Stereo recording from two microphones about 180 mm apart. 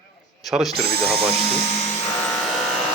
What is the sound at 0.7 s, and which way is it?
Speech, 60° right (ahead or behind).